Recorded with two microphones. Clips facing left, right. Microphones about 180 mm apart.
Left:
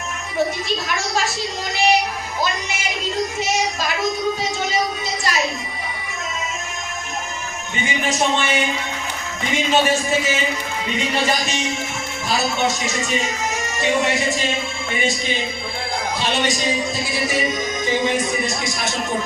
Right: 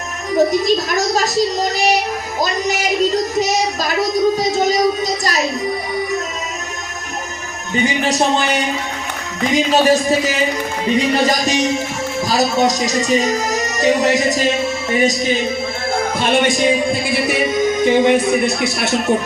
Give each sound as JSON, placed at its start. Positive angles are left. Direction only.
{"t": 0.3, "sound": "speech", "side_deg": -40}
{"t": 4.4, "sound": "a sound", "side_deg": -40}
{"t": 8.0, "sound": "speech", "side_deg": -35}
{"t": 16.1, "sound": "music", "side_deg": -55}